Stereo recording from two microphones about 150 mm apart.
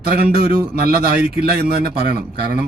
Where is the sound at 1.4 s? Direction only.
90° right.